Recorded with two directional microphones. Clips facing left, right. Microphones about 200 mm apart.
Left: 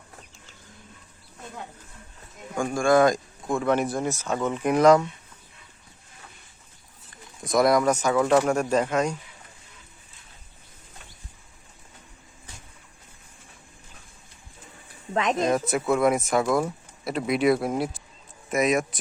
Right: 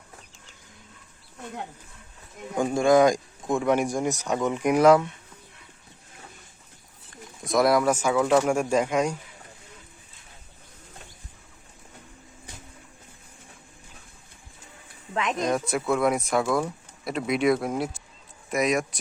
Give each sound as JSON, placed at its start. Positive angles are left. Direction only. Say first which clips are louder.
{"t": 2.6, "sound": "speech", "louder": "right 1 dB", "side_deg": -20}
{"t": 7.4, "sound": "speech", "louder": "left 1 dB", "side_deg": 0}
{"t": 15.1, "sound": "speech", "louder": "left 3 dB", "side_deg": 35}
{"t": 15.4, "sound": "speech", "louder": "left 2 dB", "side_deg": 0}